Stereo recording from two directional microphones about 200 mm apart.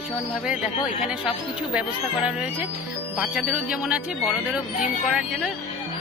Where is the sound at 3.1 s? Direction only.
5° right (ahead or behind).